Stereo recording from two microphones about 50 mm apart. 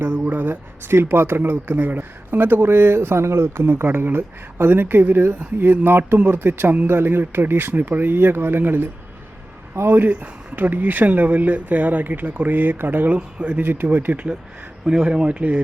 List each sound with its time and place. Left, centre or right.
0.0 s speech: right
9.9 s speech: right
13.1 s speech: right
13.6 s speech: right
14.8 s speech: centre